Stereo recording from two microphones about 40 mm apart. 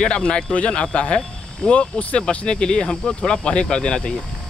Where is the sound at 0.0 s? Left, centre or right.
Left.